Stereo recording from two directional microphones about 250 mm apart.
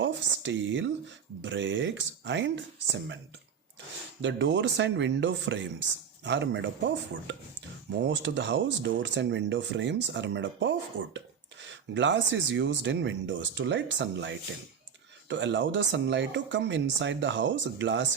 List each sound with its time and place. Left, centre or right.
0.0 s speech: right
4.2 s speech: right